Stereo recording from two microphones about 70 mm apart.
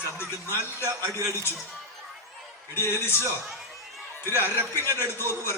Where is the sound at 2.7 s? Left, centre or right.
Left.